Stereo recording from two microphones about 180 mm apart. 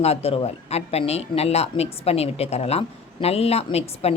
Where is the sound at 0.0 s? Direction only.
35° left (ahead or behind).